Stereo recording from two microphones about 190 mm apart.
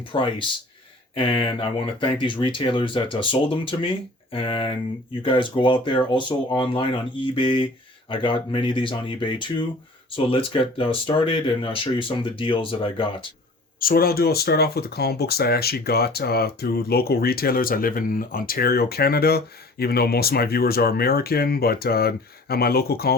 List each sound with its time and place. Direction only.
0.1 s speech: 25° left (ahead or behind)
13.7 s speech: 50° left (ahead or behind)